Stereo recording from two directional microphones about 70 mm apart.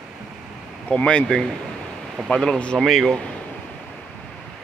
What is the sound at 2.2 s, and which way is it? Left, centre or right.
Speech, centre.